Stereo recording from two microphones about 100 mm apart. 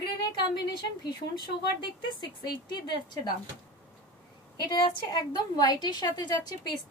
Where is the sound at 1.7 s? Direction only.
50° left (ahead or behind).